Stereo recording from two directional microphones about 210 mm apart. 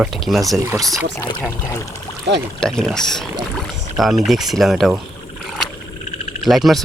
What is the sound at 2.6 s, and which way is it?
Speech, centre (ahead or behind).